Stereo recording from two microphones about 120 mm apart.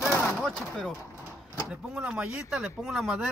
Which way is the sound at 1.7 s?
10° right (ahead or behind).